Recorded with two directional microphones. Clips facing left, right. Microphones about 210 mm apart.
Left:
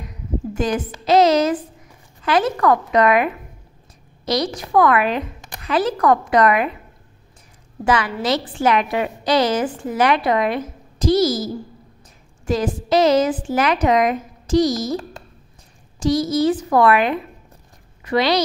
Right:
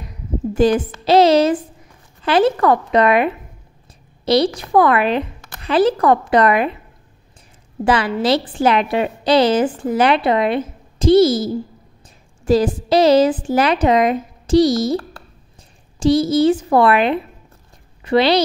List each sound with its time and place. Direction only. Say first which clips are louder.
0.6 s a woman's voice: right 8 dB; 30° right (ahead or behind)
4.3 s a woman's voice: right 5 dB; 30° right (ahead or behind)
7.8 s a woman's voice: right 3 dB; 30° right (ahead or behind)
16.0 s a woman's voice: right 4 dB; 30° right (ahead or behind)